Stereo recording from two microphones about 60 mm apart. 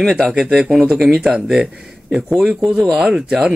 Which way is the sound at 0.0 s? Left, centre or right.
Centre.